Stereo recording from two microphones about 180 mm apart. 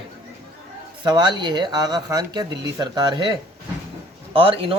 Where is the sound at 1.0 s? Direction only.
25° right (ahead or behind).